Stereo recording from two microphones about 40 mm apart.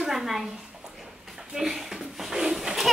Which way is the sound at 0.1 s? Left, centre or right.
Centre.